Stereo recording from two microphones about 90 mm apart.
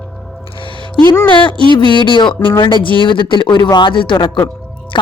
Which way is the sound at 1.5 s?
70° right (ahead or behind).